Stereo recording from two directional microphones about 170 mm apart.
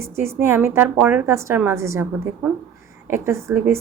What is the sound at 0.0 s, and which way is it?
A woman's voice, 15° right (ahead or behind).